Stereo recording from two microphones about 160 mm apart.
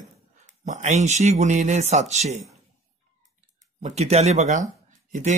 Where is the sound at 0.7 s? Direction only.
45° right (ahead or behind).